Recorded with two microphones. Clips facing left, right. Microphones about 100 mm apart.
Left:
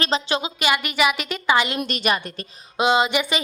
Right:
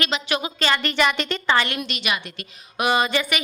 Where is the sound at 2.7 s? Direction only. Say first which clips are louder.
Left 2 dB; 20° left (ahead or behind).